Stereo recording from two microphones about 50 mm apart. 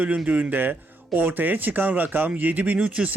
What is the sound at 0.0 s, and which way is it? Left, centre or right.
Speech, right.